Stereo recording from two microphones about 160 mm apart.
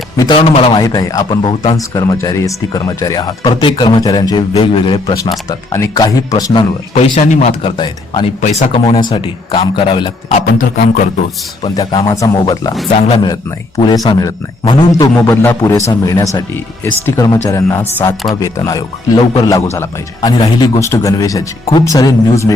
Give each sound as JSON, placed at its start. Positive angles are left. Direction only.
{"t": 0.2, "sound": "a man's voice", "side_deg": 30}
{"t": 0.7, "sound": "speech", "side_deg": 25}
{"t": 5.5, "sound": "speech", "side_deg": 20}
{"t": 6.9, "sound": "speech", "side_deg": 45}
{"t": 7.6, "sound": "speech", "side_deg": 30}
{"t": 8.4, "sound": "a man's voice", "side_deg": 45}
{"t": 11.6, "sound": "speech", "side_deg": 25}
{"t": 13.0, "sound": "speech", "side_deg": 40}
{"t": 13.2, "sound": "speech", "side_deg": 25}
{"t": 15.1, "sound": "speech", "side_deg": 15}